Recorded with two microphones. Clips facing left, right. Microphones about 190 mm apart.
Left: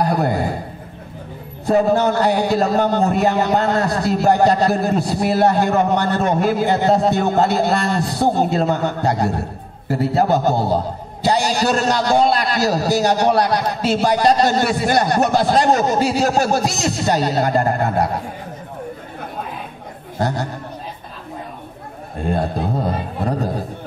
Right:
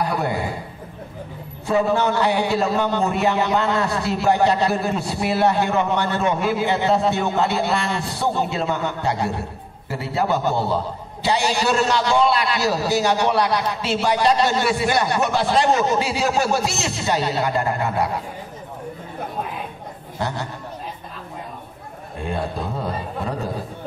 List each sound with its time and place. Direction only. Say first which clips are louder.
0.0 s a man's voice: left 4 dB; 45° left (ahead or behind)
1.7 s a man's voice: left 4 dB; 45° left (ahead or behind)
20.2 s a man's voice: left 5 dB; 40° left (ahead or behind)
22.2 s a man's voice: left 5 dB; 40° left (ahead or behind)